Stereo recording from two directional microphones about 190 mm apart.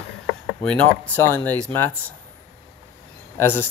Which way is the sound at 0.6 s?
10° left (ahead or behind).